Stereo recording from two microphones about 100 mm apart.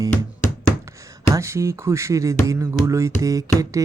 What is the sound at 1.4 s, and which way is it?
Speech, 30° right (ahead or behind).